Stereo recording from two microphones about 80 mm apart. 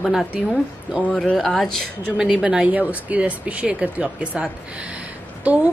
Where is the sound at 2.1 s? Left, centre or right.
Centre.